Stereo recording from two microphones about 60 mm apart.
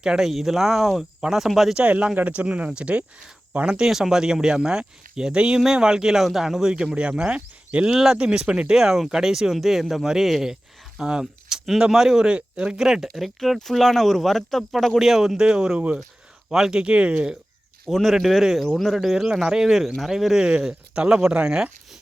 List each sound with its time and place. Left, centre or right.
0.0 s speech: centre
1.7 s speech: right
3.8 s speech: centre
7.9 s speech: centre
12.8 s speech: centre
17.8 s speech: centre